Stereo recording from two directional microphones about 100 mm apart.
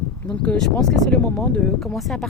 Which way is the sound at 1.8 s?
Centre (ahead or behind).